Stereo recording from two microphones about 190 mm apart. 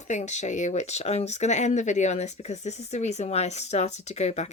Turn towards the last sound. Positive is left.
turn(degrees=35)  # may be behind; listen again after turning